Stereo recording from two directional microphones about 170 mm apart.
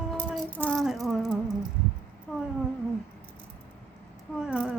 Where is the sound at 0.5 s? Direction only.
5° left (ahead or behind).